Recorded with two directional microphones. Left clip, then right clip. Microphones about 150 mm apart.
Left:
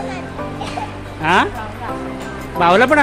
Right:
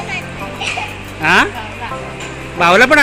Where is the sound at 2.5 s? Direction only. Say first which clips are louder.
Right 3 dB; 5° left (ahead or behind).